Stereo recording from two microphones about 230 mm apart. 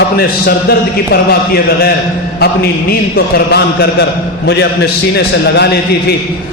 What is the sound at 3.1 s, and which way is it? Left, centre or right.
A man's voice, left.